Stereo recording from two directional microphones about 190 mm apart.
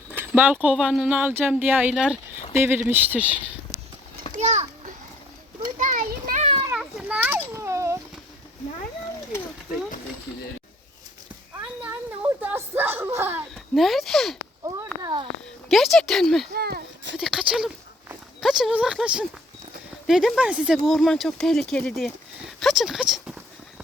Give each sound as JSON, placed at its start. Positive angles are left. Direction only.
{"t": 0.2, "sound": "speech", "side_deg": -10}
{"t": 4.3, "sound": "children playing", "side_deg": -35}
{"t": 6.7, "sound": "children playing", "side_deg": -5}
{"t": 11.6, "sound": "a sound", "side_deg": -10}
{"t": 13.7, "sound": "speech", "side_deg": 0}
{"t": 14.6, "sound": "a sound", "side_deg": -20}
{"t": 15.7, "sound": "speech", "side_deg": 0}
{"t": 16.6, "sound": "a sound", "side_deg": -55}
{"t": 17.2, "sound": "speech", "side_deg": -5}